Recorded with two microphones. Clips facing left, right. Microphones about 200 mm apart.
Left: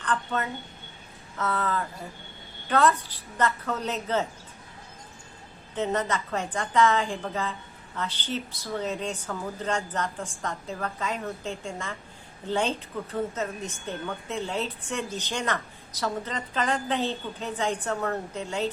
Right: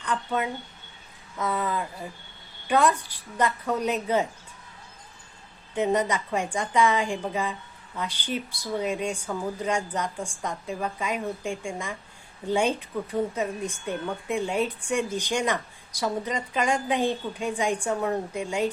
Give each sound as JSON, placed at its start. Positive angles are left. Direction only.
{"t": 0.0, "sound": "a woman's voice", "side_deg": -10}
{"t": 5.7, "sound": "a woman's voice", "side_deg": -15}